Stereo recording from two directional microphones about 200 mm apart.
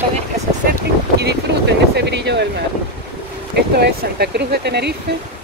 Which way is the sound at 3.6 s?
50° right (ahead or behind).